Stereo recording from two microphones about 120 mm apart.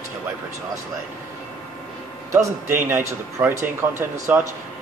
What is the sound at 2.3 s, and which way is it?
A man's voice, 20° right (ahead or behind).